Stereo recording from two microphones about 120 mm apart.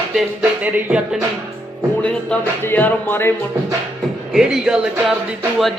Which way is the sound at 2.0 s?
5° left (ahead or behind).